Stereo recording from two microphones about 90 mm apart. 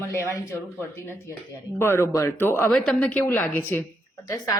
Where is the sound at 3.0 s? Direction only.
15° left (ahead or behind).